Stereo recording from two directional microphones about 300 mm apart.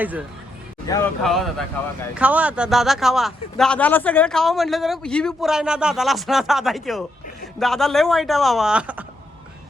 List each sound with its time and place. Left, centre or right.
0.0 s speech: centre
0.9 s speech: centre